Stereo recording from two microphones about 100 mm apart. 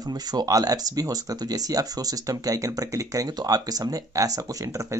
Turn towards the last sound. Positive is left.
turn(degrees=-35)  # may be behind; listen again after turning